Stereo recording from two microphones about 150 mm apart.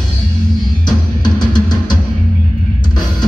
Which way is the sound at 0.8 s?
30° left (ahead or behind).